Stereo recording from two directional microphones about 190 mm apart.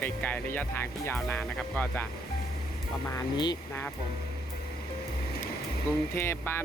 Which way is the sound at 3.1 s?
20° left (ahead or behind).